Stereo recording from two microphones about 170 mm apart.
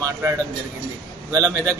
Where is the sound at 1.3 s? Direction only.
15° right (ahead or behind).